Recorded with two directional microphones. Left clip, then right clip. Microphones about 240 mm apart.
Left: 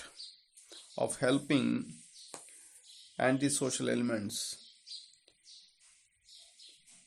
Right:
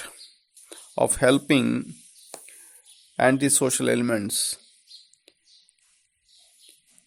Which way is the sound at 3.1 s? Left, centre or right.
Right.